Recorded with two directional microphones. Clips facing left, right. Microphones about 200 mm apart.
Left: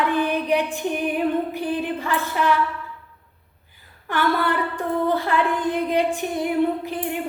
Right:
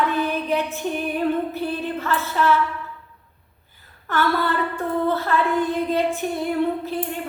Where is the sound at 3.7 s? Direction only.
15° left (ahead or behind).